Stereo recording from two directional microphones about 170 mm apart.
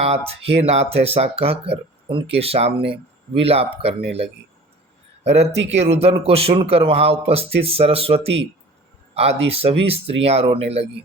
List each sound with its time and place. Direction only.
0.0 s speech: 35° right (ahead or behind)
5.2 s speech: 40° right (ahead or behind)
9.5 s speech: 35° right (ahead or behind)